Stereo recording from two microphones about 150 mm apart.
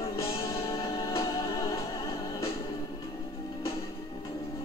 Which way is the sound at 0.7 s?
20° left (ahead or behind).